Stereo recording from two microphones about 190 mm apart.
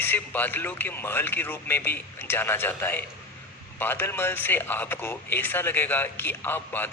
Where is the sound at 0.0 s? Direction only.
10° left (ahead or behind).